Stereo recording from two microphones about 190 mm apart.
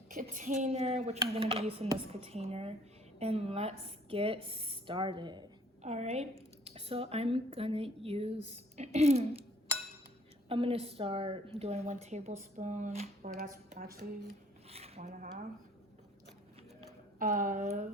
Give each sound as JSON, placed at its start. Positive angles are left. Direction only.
{"t": 0.1, "sound": "a woman's voice", "side_deg": -45}
{"t": 5.8, "sound": "a woman's voice", "side_deg": -35}
{"t": 10.5, "sound": "a woman's voice", "side_deg": -30}
{"t": 14.7, "sound": "a sound", "side_deg": -30}
{"t": 17.2, "sound": "a woman's voice", "side_deg": -45}